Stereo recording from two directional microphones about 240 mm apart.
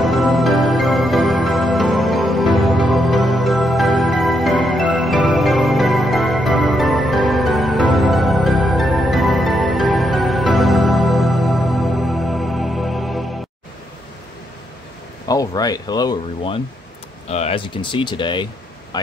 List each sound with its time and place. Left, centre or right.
0.0 s music: centre
15.2 s speech: centre